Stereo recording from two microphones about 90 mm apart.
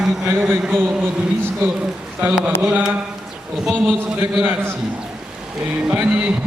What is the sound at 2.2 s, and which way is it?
Speech, 10° right (ahead or behind).